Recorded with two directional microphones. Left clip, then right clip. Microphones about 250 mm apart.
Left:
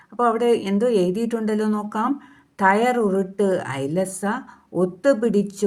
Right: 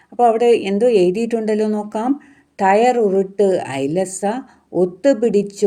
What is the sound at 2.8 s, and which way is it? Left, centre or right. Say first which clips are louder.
Speech: right 5 dB; left.